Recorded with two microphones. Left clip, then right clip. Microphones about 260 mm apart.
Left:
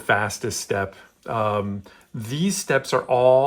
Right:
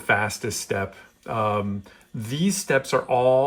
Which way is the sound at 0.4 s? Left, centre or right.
Centre.